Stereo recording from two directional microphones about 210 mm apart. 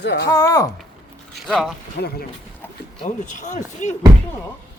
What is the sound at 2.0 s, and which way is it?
Speech, 50° left (ahead or behind).